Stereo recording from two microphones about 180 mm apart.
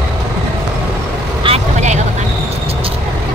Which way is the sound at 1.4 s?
35° right (ahead or behind).